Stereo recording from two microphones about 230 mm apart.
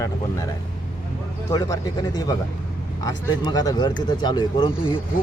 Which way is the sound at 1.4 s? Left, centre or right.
Centre.